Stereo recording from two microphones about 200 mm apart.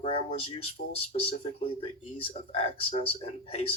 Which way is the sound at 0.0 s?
25° left (ahead or behind).